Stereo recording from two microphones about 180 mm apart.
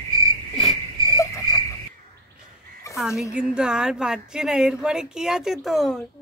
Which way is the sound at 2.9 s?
Centre (ahead or behind).